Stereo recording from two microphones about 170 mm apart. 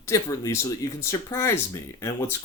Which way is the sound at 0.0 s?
20° left (ahead or behind).